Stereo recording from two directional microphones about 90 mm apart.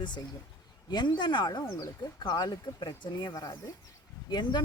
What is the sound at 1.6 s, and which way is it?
Speech, 40° left (ahead or behind).